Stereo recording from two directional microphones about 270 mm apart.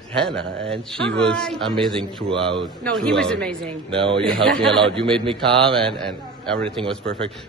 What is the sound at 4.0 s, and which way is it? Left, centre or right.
Speech, centre.